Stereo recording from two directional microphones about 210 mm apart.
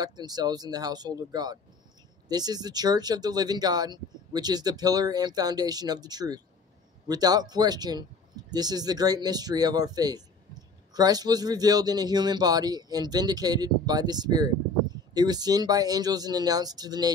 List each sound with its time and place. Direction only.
0.0 s speech: 20° right (ahead or behind)